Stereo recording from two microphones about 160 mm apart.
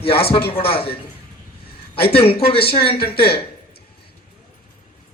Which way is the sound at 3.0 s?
75° left (ahead or behind).